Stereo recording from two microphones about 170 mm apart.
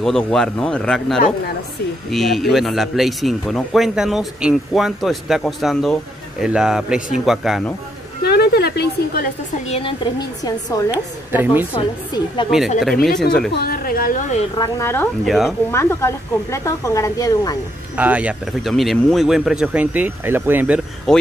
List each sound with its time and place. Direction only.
0.0 s speech: 5° left (ahead or behind)
8.2 s a sound: 70° left (ahead or behind)
9.7 s speech: 30° left (ahead or behind)
10.9 s speech: 10° right (ahead or behind)
11.7 s speech: 30° left (ahead or behind)
12.4 s speech: centre (ahead or behind)
13.5 s a woman's voice: 65° left (ahead or behind)
14.6 s speech: 15° left (ahead or behind)
15.2 s speech: centre (ahead or behind)
15.7 s speech: 15° left (ahead or behind)
17.9 s speech: 10° right (ahead or behind)
21.1 s speech: centre (ahead or behind)